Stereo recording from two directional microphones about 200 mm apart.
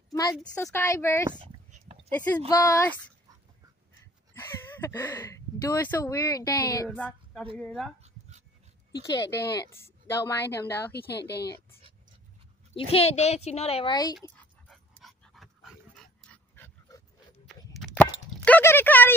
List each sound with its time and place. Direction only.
0.1 s a sound: 20° left (ahead or behind)
0.4 s a woman's voice: 10° left (ahead or behind)
4.4 s speech: 10° left (ahead or behind)
8.0 s dog: 35° right (ahead or behind)
9.6 s a woman's voice: 10° left (ahead or behind)
10.9 s a woman's voice: 55° left (ahead or behind)
12.7 s a child's voice: 30° left (ahead or behind)
14.3 s dog: 5° left (ahead or behind)
17.7 s a sound: 5° left (ahead or behind)